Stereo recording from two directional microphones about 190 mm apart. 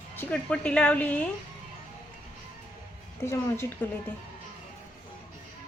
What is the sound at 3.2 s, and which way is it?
Speech, 10° left (ahead or behind).